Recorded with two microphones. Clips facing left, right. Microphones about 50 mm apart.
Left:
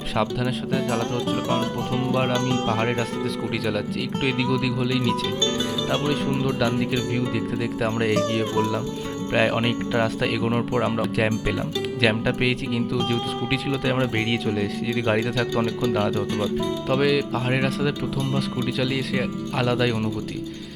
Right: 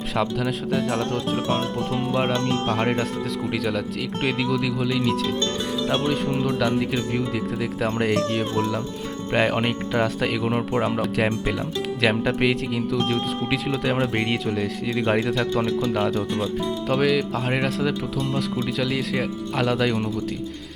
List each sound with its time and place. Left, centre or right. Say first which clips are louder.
0.9 s speech: even; right
3.5 s speech: even; centre
15.9 s speech: even; centre